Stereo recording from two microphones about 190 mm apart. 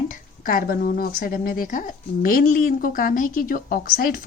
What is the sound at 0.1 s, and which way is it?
Speech, 50° left (ahead or behind).